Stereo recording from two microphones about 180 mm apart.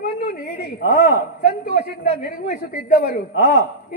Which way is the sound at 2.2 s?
50° left (ahead or behind).